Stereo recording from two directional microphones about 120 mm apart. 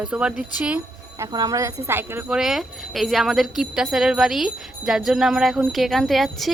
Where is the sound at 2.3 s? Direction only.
5° right (ahead or behind).